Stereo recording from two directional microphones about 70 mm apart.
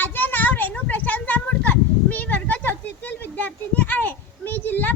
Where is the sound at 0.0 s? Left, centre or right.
Left.